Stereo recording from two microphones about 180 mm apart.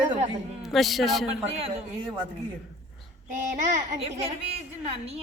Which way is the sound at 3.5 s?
45° right (ahead or behind).